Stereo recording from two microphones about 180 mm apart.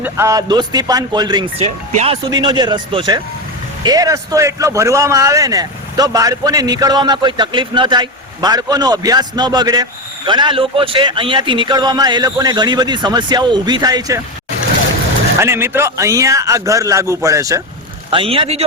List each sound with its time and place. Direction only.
0.0 s a man's voice: 15° right (ahead or behind)
1.5 s a man's voice: 35° right (ahead or behind)
15.4 s a man's voice: 15° right (ahead or behind)
18.1 s speech: 30° right (ahead or behind)